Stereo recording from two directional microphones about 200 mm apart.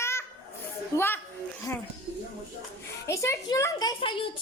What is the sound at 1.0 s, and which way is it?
Speech, 10° left (ahead or behind).